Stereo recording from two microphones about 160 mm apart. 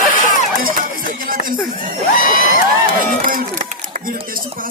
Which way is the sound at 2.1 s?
60° left (ahead or behind).